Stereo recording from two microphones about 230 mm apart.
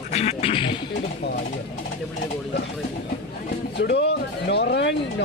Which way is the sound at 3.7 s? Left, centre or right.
Left.